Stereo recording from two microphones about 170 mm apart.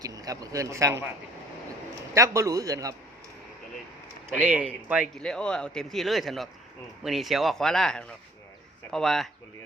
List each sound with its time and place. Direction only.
0.0 s speech: 20° right (ahead or behind)
2.1 s speech: 20° right (ahead or behind)
4.4 s speech: 5° right (ahead or behind)
5.1 s speech: 5° left (ahead or behind)